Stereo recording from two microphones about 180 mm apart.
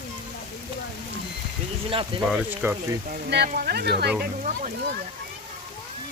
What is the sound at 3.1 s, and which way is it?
Speech, 65° right (ahead or behind).